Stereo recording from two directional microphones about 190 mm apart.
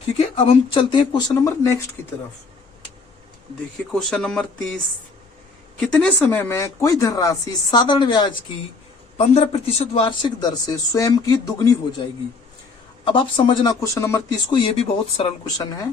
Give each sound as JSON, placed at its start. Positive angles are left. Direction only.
{"t": 0.2, "sound": "a man's voice", "side_deg": 30}
{"t": 3.9, "sound": "speech", "side_deg": 5}
{"t": 5.8, "sound": "a man's voice", "side_deg": 5}
{"t": 13.1, "sound": "a man's voice", "side_deg": 25}
{"t": 14.5, "sound": "a man's voice", "side_deg": 30}